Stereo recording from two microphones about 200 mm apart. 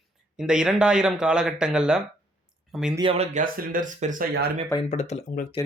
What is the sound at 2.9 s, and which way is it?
Speech, 30° right (ahead or behind).